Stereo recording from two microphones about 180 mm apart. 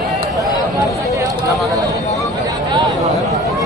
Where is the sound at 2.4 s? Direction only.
20° right (ahead or behind).